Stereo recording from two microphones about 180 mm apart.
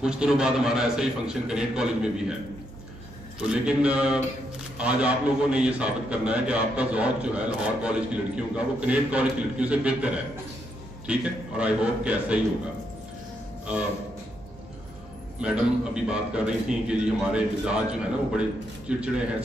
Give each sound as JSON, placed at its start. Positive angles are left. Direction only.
{"t": 0.0, "sound": "a man's voice", "side_deg": -5}
{"t": 3.3, "sound": "a man's voice", "side_deg": -5}
{"t": 15.4, "sound": "a man's voice", "side_deg": -5}